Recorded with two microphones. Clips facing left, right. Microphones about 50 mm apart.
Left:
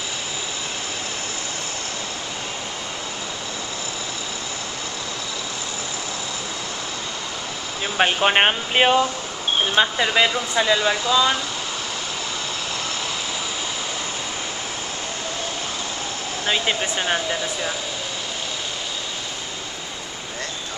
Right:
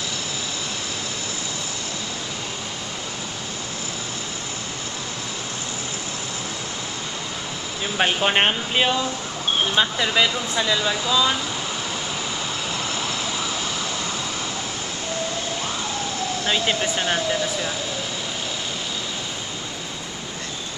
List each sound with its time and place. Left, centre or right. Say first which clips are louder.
7.8 s speech: left 2 dB; centre
8.7 s speech: left 6 dB; left
9.8 s speech: left 3 dB; centre
16.4 s speech: left 1 dB; centre